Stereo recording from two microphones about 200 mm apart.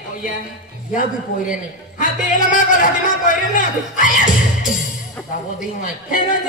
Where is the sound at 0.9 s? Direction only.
40° left (ahead or behind).